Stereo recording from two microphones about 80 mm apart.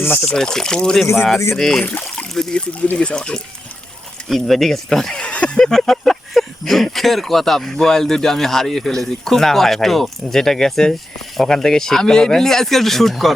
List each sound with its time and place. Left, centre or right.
0.2 s speech: centre
1.0 s speech: left
1.5 s speech: centre
1.8 s speech: left; by 13.3 s centre